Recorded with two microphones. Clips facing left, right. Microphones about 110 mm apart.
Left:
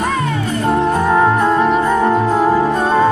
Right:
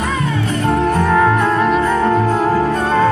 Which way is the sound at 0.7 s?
20° left (ahead or behind).